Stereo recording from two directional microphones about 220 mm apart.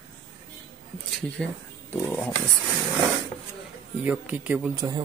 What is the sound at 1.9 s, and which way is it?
Speech, 10° left (ahead or behind).